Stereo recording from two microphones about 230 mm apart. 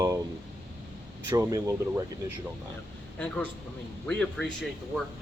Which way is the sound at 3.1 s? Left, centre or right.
Centre.